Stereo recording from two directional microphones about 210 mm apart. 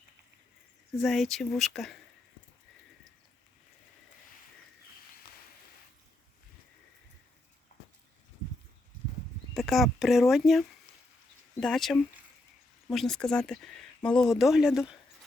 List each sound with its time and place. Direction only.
1.0 s speech: centre (ahead or behind)
7.7 s horse: 35° left (ahead or behind)
9.6 s speech: centre (ahead or behind)